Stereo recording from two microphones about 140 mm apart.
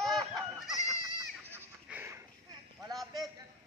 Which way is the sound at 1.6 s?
15° right (ahead or behind).